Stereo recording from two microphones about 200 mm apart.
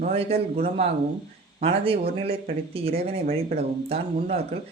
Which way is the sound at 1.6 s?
30° right (ahead or behind).